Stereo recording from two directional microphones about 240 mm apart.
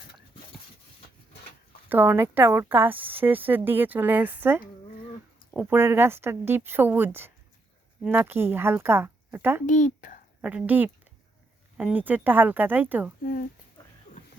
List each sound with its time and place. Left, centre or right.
1.9 s a woman's voice: centre
5.7 s a woman's voice: centre
9.6 s speech: left
10.4 s a woman's voice: centre
13.2 s speech: left